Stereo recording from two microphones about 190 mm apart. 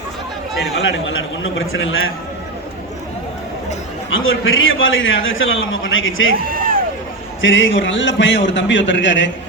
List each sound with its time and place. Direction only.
1.5 s a man's voice: 90° left
4.1 s a man's voice: 90° left
6.5 s music: 50° right (ahead or behind)
7.4 s a man's voice: 85° left; by 9.3 s 70° left (ahead or behind)